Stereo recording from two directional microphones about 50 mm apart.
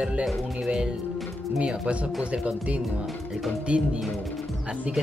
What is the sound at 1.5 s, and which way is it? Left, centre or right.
Speech, right.